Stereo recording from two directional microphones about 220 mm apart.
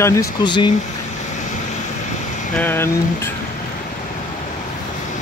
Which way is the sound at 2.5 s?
10° left (ahead or behind).